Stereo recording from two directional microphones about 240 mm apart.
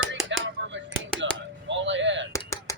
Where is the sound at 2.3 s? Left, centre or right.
Centre.